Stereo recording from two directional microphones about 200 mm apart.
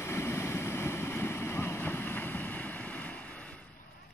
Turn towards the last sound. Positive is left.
turn(degrees=5)  # may be behind; listen again after turning